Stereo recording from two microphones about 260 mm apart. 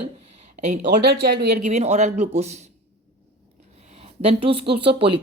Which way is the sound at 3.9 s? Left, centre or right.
Right.